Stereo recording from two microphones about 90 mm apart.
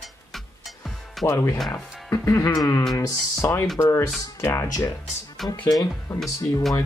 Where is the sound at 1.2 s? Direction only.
30° left (ahead or behind).